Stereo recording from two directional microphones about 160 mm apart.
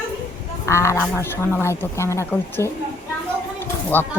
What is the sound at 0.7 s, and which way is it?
A woman's voice, 15° left (ahead or behind).